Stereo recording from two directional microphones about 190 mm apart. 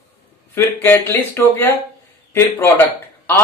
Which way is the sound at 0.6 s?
15° left (ahead or behind).